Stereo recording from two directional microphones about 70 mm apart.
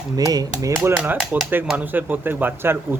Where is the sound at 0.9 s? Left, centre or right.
Right.